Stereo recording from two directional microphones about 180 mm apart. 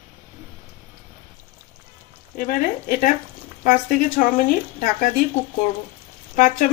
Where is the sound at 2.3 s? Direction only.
50° left (ahead or behind).